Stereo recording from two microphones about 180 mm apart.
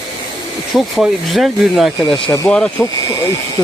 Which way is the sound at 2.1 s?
25° left (ahead or behind).